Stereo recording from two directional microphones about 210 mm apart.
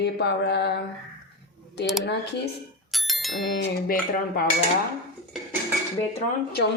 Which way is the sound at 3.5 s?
50° left (ahead or behind).